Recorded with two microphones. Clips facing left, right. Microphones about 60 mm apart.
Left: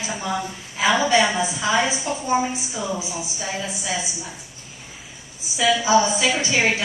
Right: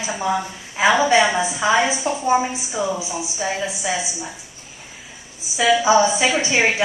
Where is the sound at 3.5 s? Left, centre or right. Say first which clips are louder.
Even; centre.